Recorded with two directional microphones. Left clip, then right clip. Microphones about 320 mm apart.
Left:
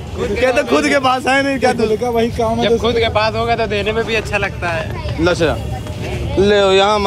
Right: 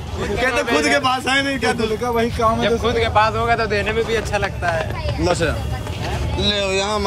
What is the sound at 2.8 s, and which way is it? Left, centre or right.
Speech, centre.